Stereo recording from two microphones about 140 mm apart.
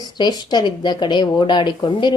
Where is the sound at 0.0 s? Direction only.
30° left (ahead or behind).